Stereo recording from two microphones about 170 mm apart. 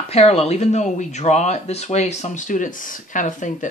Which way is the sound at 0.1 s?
35° left (ahead or behind).